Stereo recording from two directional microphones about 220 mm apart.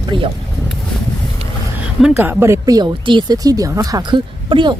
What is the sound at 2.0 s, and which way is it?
Speech, 10° right (ahead or behind).